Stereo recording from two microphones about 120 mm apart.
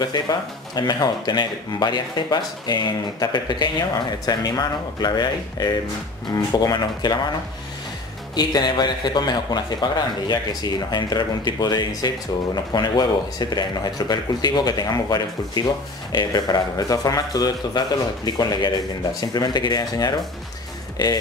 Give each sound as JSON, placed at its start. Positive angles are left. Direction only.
{"t": 0.0, "sound": "speech", "side_deg": 35}
{"t": 8.4, "sound": "speech", "side_deg": 35}